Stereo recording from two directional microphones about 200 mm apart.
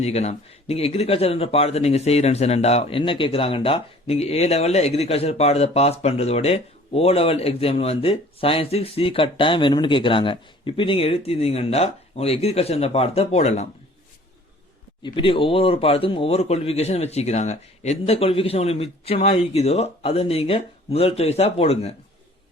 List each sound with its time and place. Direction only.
0.0 s speech: 35° left (ahead or behind)
15.0 s speech: 25° left (ahead or behind)